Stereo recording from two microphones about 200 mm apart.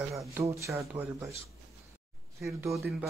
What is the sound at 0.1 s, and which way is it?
Speech, 15° right (ahead or behind).